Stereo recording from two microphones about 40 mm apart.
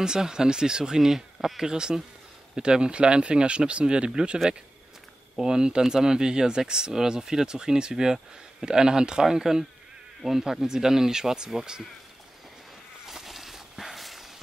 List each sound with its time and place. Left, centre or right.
0.0 s speech: centre
5.4 s speech: centre
13.0 s a sound: centre